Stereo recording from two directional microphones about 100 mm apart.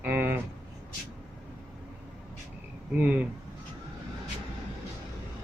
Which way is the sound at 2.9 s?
15° right (ahead or behind).